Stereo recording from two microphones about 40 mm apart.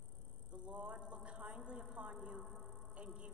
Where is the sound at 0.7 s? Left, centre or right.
Right.